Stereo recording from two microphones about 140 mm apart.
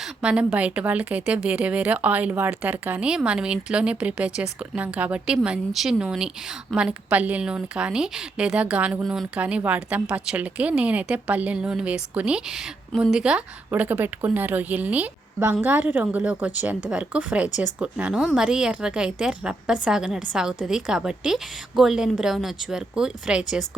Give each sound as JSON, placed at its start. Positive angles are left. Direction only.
{"t": 0.0, "sound": "a woman's voice", "side_deg": -5}